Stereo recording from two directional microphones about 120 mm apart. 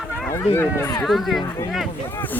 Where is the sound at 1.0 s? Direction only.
Centre (ahead or behind).